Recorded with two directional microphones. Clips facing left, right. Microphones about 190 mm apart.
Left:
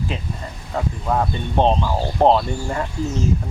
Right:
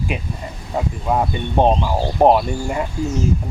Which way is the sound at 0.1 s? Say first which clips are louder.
Right 2 dB; 15° right (ahead or behind).